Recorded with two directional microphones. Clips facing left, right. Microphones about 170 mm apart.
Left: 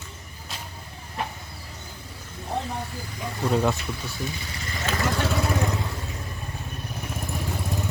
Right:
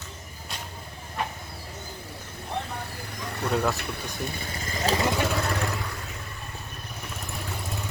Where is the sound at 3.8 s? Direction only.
55° right (ahead or behind).